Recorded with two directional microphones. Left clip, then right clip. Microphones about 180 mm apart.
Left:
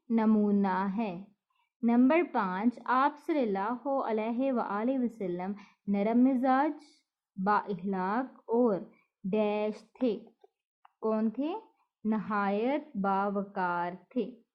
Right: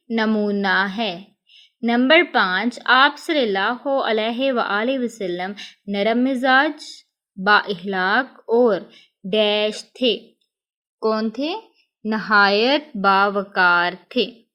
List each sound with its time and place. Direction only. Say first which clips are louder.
0.3 s speech: right 11 dB; 10° right (ahead or behind)
8.4 s speech: right 11 dB; 40° right (ahead or behind)
9.3 s speech: right 12 dB; 15° right (ahead or behind)